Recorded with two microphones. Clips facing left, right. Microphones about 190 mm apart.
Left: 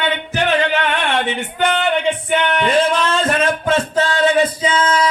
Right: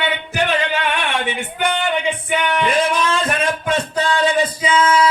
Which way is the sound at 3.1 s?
15° right (ahead or behind).